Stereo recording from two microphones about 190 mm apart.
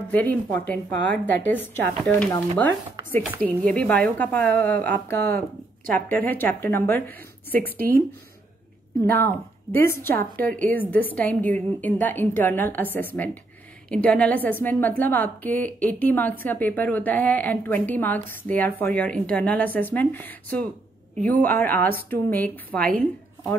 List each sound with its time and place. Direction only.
0.1 s a woman's voice: 10° left (ahead or behind)
7.6 s speech: 50° right (ahead or behind)
9.0 s a woman's voice: 10° left (ahead or behind)